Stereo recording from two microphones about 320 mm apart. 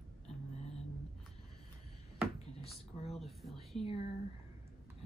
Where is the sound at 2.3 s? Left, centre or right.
Centre.